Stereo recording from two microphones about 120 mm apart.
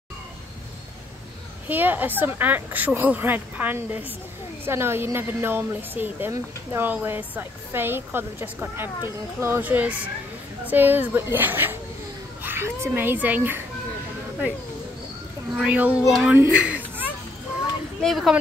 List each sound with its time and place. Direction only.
1.7 s speech: 15° right (ahead or behind)
15.5 s speech: 10° right (ahead or behind)
16.1 s speech: centre (ahead or behind)
16.3 s a sound: 10° right (ahead or behind)
18.0 s speech: centre (ahead or behind)